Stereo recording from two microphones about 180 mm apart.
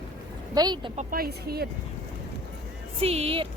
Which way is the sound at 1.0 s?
55° right (ahead or behind).